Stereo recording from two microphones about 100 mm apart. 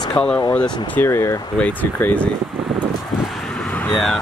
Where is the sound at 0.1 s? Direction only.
10° left (ahead or behind).